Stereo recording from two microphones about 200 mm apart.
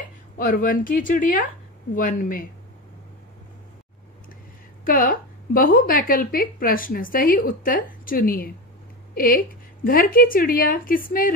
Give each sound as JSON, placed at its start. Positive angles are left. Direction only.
{"t": 0.4, "sound": "a woman's voice", "side_deg": 45}
{"t": 4.8, "sound": "a woman's voice", "side_deg": 45}